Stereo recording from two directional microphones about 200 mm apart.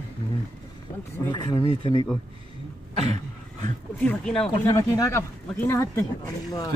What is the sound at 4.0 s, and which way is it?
Speech, 5° left (ahead or behind).